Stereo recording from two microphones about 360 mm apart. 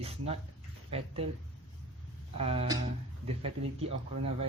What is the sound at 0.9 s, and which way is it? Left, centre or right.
Speech, centre.